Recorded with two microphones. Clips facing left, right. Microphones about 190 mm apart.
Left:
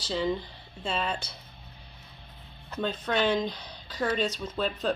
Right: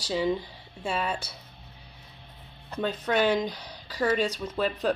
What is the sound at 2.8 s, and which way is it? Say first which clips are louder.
Speech: right 2 dB; 10° right (ahead or behind).